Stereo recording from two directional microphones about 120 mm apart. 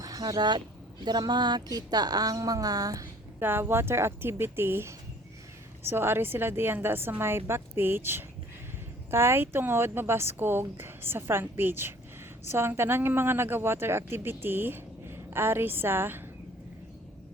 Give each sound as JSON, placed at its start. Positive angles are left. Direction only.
{"t": 0.0, "sound": "speech", "side_deg": -30}
{"t": 3.4, "sound": "speech", "side_deg": -20}